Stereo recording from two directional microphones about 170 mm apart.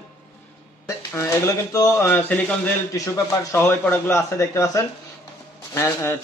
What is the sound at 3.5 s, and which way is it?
A man's voice, 15° left (ahead or behind).